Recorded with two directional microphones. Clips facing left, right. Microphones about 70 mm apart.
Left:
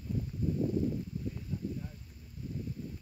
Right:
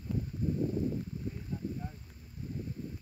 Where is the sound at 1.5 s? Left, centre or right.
Right.